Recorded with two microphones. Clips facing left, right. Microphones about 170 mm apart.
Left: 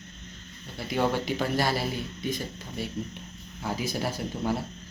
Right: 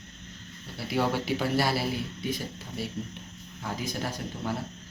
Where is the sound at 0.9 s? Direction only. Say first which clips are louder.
Left 1 dB; 5° right (ahead or behind).